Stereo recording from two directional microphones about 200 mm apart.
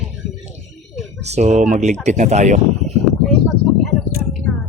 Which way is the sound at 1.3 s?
35° right (ahead or behind).